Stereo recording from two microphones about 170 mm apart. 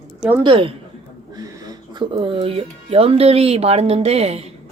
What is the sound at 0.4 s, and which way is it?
Speech, 30° right (ahead or behind).